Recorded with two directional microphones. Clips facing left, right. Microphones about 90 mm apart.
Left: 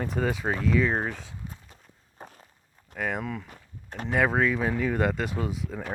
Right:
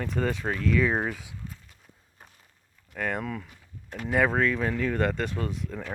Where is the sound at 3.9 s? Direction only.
35° left (ahead or behind).